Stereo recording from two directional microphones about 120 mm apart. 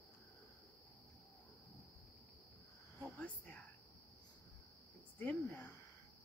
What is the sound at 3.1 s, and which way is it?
Whispering, 15° left (ahead or behind).